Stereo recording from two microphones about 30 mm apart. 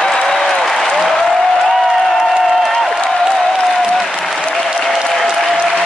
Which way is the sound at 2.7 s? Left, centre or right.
Centre.